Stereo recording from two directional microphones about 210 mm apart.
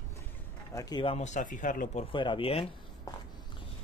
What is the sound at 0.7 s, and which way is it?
Speech, 20° left (ahead or behind).